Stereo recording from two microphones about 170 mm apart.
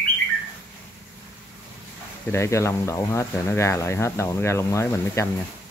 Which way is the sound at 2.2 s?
15° left (ahead or behind).